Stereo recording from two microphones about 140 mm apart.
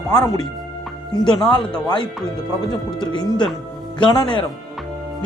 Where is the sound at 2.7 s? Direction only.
30° left (ahead or behind).